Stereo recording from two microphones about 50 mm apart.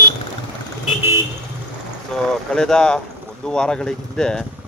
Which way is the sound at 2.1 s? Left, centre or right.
Centre.